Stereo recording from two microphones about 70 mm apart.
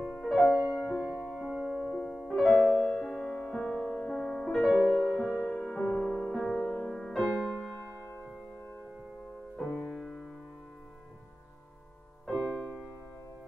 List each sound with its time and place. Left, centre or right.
0.0 s music: centre
1.0 s music: right
1.7 s music: centre
2.2 s music: centre
4.1 s music: centre
5.3 s music: left
5.8 s music: centre
6.5 s music: centre
9.6 s music: centre
12.3 s music: centre